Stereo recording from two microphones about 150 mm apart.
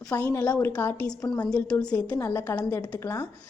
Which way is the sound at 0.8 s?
10° left (ahead or behind).